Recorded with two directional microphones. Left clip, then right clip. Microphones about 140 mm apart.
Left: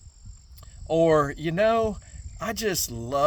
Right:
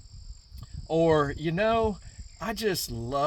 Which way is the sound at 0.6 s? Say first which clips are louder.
Left 3 dB; 40° left (ahead or behind).